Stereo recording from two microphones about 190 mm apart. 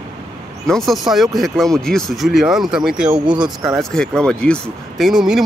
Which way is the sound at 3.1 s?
25° right (ahead or behind).